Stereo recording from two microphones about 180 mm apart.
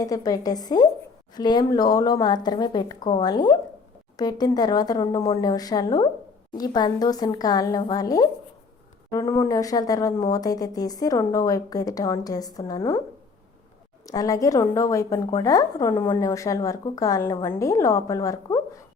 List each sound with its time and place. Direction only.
0.0 s speech: 20° left (ahead or behind)
14.1 s a woman's voice: 20° left (ahead or behind)